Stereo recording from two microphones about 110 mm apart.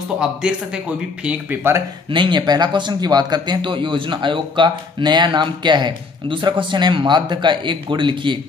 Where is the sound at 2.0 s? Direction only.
45° right (ahead or behind).